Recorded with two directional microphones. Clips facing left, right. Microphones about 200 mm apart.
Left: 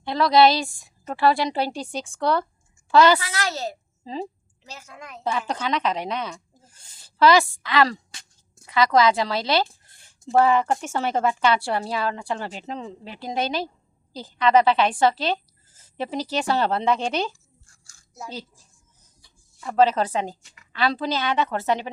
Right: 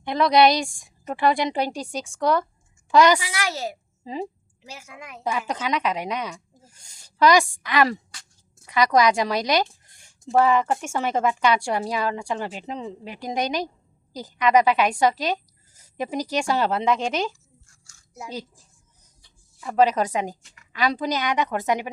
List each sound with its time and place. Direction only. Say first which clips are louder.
0.0 s a woman's voice: even; 15° right (ahead or behind)
0.7 s a woman's voice: right 1 dB; centre (ahead or behind)
1.0 s a woman's voice: left 1 dB; 15° right (ahead or behind)
2.9 s a woman's voice: even; 15° right (ahead or behind)
8.1 s a sound: even; 20° left (ahead or behind)
8.7 s a woman's voice: even; 15° right (ahead or behind)
9.8 s a sound: even; 15° right (ahead or behind)
10.3 s a woman's voice: even; 35° left (ahead or behind)
10.7 s a woman's voice: even; 10° right (ahead or behind)
11.1 s a woman's voice: even; 35° left (ahead or behind)
11.4 s a woman's voice: even; 15° right (ahead or behind)
18.1 s a woman's voice: right 2 dB; 10° right (ahead or behind)
19.7 s a woman's voice: even; 15° right (ahead or behind)